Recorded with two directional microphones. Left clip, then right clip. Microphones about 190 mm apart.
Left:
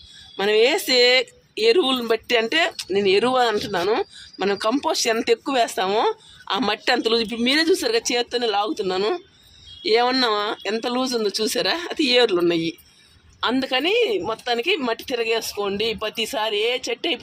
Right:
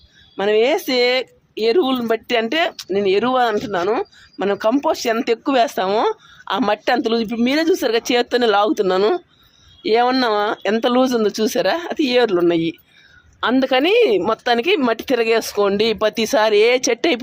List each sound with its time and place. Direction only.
0.3 s speech: 35° right (ahead or behind); by 17.2 s 60° right (ahead or behind)